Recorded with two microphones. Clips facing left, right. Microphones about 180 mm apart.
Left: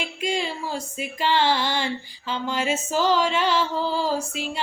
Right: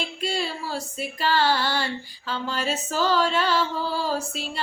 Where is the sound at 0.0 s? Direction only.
15° left (ahead or behind).